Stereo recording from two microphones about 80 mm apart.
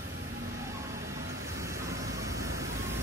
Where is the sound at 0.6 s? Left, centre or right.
Right.